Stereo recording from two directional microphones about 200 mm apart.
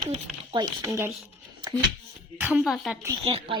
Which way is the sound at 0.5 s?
15° right (ahead or behind).